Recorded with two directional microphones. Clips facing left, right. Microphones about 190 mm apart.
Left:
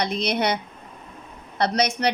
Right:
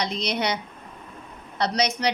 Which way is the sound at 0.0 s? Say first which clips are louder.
Left 3 dB; 55° left (ahead or behind).